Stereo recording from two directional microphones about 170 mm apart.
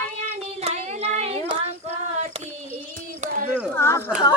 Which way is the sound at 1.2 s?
35° right (ahead or behind).